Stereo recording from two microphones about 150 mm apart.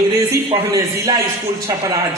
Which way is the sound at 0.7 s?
20° right (ahead or behind).